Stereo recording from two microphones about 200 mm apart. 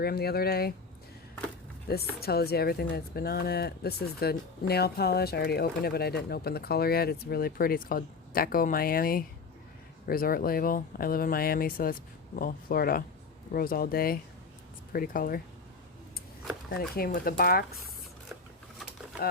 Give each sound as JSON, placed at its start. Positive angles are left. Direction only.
{"t": 0.0, "sound": "speech", "side_deg": 50}
{"t": 1.9, "sound": "speech", "side_deg": 50}
{"t": 16.9, "sound": "speech", "side_deg": 50}